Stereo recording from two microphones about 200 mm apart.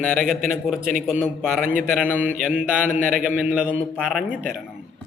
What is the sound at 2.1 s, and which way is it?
Mantra, 10° right (ahead or behind).